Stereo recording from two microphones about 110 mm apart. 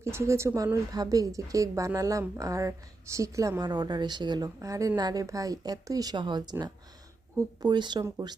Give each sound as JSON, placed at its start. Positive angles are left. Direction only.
{"t": 0.0, "sound": "speech", "side_deg": -25}